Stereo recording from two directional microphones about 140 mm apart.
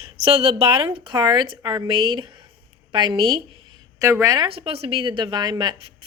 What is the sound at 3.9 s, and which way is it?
Speech, 25° right (ahead or behind).